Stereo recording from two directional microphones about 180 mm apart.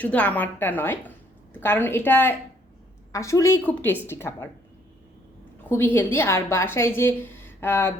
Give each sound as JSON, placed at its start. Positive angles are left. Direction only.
{"t": 0.0, "sound": "a woman's voice", "side_deg": 10}
{"t": 5.6, "sound": "a woman's voice", "side_deg": 10}